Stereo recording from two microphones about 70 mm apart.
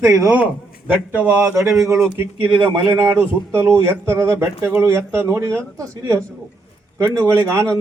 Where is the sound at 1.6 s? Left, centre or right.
Right.